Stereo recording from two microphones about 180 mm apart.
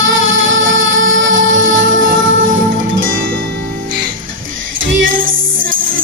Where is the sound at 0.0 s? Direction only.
90° right.